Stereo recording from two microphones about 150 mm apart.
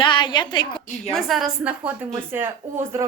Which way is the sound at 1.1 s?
Centre (ahead or behind).